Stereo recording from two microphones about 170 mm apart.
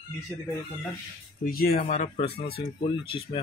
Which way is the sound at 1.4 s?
65° left (ahead or behind).